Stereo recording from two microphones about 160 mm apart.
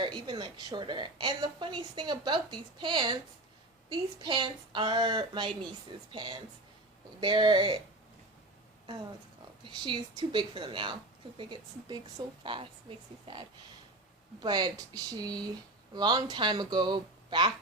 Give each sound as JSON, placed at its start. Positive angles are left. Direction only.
{"t": 0.0, "sound": "a woman's voice", "side_deg": -30}
{"t": 9.6, "sound": "a woman's voice", "side_deg": -30}